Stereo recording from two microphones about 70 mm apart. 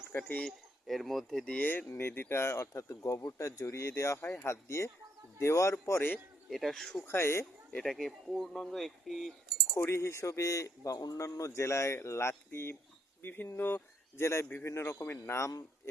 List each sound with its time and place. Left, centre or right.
0.1 s speech: left
0.4 s speech: centre
1.5 s speech: left
6.5 s speech: centre
7.0 s speech: left
7.9 s speech: centre
9.9 s speech: left
11.2 s speech: left